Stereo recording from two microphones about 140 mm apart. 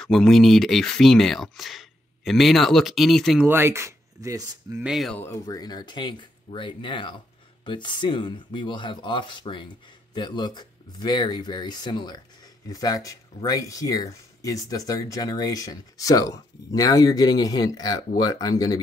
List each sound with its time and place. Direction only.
0.0 s speech: centre (ahead or behind)
3.4 s speech: 15° right (ahead or behind)
4.8 s speech: centre (ahead or behind)
5.2 s speech: 25° left (ahead or behind)